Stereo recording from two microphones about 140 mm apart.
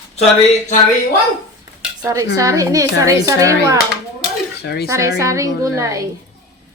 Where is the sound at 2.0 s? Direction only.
25° right (ahead or behind).